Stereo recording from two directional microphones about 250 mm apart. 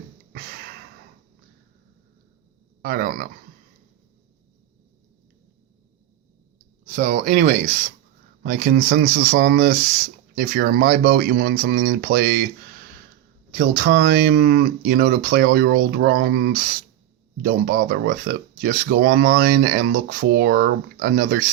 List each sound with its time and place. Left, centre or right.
2.8 s speech: right
6.8 s speech: right
13.5 s speech: right